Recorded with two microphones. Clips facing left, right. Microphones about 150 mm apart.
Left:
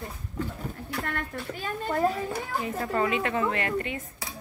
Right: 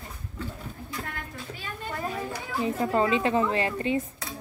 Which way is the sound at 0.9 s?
70° left (ahead or behind).